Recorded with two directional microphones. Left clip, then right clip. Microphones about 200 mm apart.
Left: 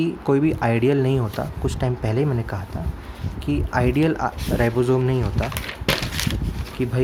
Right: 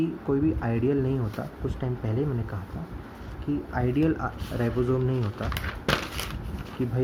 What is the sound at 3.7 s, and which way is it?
Speech, 45° left (ahead or behind).